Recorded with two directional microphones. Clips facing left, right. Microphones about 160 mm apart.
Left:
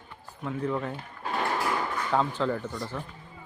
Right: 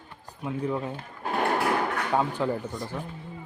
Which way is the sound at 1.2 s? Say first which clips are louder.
Right 4 dB; 50° right (ahead or behind).